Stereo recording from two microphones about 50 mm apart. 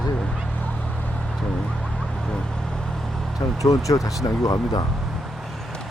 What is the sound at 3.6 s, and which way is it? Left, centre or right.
Speech, left.